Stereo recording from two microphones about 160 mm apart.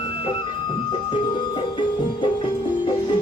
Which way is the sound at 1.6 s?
30° left (ahead or behind).